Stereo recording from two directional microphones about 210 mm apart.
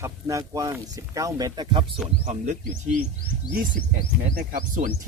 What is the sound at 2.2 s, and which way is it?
Speech, 35° right (ahead or behind).